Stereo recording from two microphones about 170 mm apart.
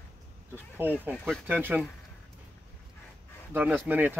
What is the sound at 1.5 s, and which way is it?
Speech, 10° right (ahead or behind).